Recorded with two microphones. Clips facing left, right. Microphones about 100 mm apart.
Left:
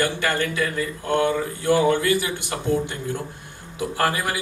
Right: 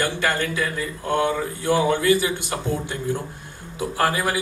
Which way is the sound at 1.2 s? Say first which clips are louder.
Left 1 dB; 20° right (ahead or behind).